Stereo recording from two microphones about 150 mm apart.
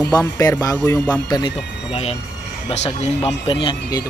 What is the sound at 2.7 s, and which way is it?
Speech, 45° left (ahead or behind).